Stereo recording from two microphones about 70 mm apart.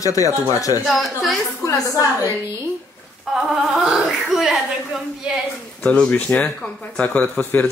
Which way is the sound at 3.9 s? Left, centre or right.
Centre.